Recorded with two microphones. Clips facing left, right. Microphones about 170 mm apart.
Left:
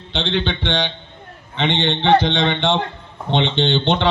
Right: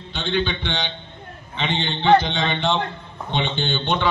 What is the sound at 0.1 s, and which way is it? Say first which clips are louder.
A man's voice: left 2 dB; 75° left (ahead or behind).